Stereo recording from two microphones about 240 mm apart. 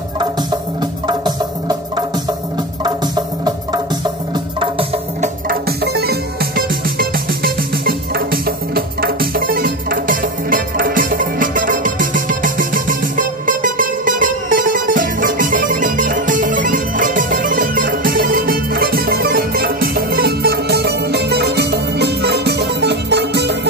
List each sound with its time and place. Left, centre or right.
1.0 s music: centre
5.5 s music: right